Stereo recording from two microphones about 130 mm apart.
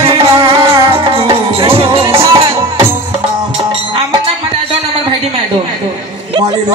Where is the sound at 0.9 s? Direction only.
45° right (ahead or behind).